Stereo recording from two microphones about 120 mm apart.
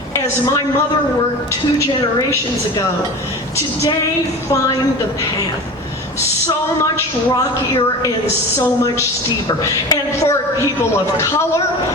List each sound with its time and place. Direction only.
8.5 s a woman's voice: 25° left (ahead or behind)